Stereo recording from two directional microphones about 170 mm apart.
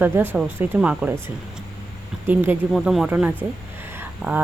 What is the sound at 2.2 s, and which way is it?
Speech, 10° right (ahead or behind).